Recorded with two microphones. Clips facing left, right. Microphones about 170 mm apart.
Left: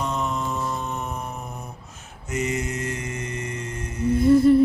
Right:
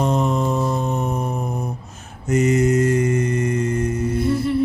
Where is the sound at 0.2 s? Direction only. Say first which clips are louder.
Right 7 dB; 50° right (ahead or behind).